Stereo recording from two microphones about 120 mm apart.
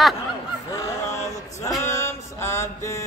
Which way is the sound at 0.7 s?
30° left (ahead or behind).